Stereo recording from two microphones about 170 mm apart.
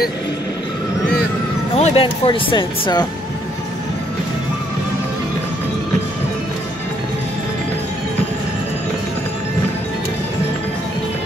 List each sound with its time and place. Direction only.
1.8 s speech: 35° left (ahead or behind)